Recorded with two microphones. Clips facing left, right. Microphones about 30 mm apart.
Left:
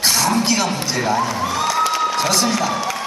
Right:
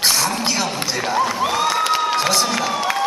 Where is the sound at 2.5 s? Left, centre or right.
Right.